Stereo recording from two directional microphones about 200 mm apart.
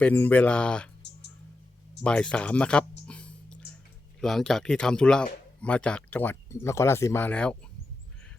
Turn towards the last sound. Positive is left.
turn(degrees=5)  # may be behind; listen again after turning